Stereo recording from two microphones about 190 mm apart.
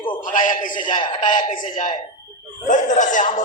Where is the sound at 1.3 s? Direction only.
45° left (ahead or behind).